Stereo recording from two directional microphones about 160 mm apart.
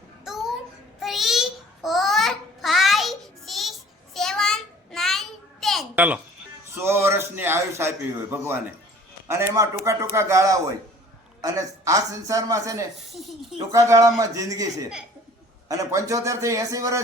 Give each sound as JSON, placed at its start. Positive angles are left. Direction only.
{"t": 0.3, "sound": "babbling", "side_deg": 0}
{"t": 6.7, "sound": "a man's voice", "side_deg": -15}
{"t": 13.1, "sound": "speech", "side_deg": 0}
{"t": 13.7, "sound": "a man's voice", "side_deg": -20}